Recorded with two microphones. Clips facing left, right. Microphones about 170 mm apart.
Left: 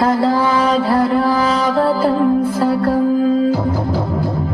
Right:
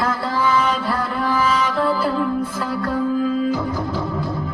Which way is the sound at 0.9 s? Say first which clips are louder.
Left 8 dB; 35° left (ahead or behind).